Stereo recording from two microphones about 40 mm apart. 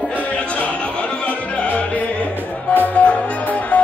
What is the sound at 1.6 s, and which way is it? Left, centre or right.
Music, left.